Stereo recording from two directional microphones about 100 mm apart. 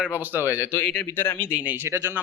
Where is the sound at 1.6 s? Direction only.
20° right (ahead or behind).